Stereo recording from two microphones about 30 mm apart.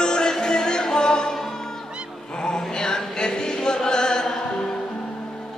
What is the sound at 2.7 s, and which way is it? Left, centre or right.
Chant, left.